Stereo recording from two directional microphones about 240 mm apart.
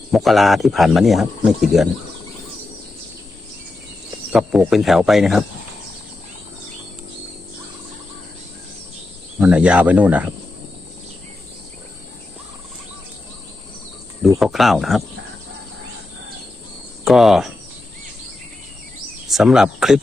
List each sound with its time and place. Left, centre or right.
0.1 s speech: centre
4.3 s speech: centre
9.4 s speech: centre
14.3 s speech: centre
17.0 s speech: centre
19.3 s speech: centre